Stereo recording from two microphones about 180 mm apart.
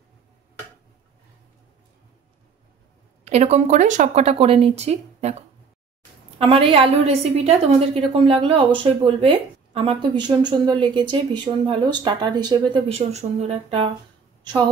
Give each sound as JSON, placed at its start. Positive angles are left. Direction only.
{"t": 3.3, "sound": "a woman's voice", "side_deg": -35}